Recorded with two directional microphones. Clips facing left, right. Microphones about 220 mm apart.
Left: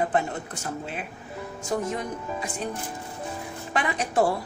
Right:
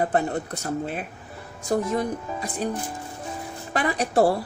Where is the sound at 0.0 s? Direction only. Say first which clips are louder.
Right 2 dB; 40° right (ahead or behind).